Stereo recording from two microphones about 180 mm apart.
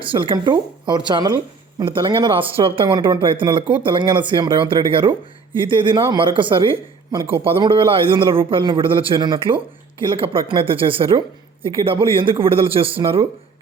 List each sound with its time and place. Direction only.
0.1 s speech: 25° right (ahead or behind)